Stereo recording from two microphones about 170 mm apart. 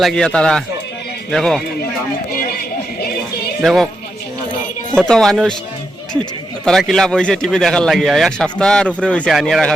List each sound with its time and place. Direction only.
0.0 s a man's voice: 5° left (ahead or behind)
2.3 s a sound: 60° left (ahead or behind)
3.6 s a man's voice: centre (ahead or behind)
4.9 s a man's voice: 5° left (ahead or behind)
6.7 s a man's voice: centre (ahead or behind)